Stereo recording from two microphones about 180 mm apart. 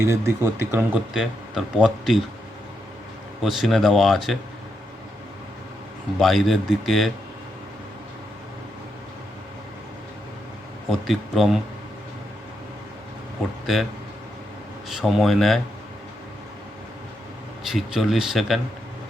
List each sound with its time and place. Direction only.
0.0 s a man's voice: 15° right (ahead or behind)
3.4 s speech: centre (ahead or behind)
6.1 s speech: centre (ahead or behind)
10.8 s speech: centre (ahead or behind)
14.8 s speech: centre (ahead or behind)
17.7 s speech: centre (ahead or behind)